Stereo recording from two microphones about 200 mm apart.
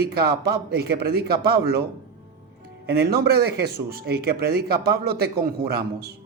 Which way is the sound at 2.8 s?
50° right (ahead or behind).